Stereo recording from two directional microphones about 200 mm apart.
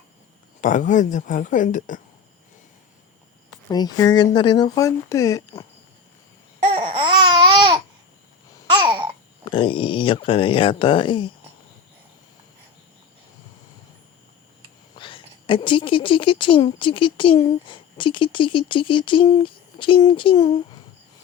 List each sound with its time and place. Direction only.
0.6 s speech: 40° left (ahead or behind)
3.7 s a woman's voice: 20° left (ahead or behind)
6.7 s babbling: 30° right (ahead or behind)
9.4 s a woman's voice: 25° left (ahead or behind)
14.9 s a woman's voice: 25° left (ahead or behind)